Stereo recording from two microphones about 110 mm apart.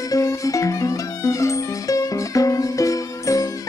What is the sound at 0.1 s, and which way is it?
Music, 30° left (ahead or behind).